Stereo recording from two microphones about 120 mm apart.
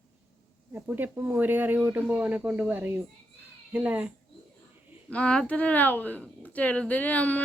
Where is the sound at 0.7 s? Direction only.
15° right (ahead or behind).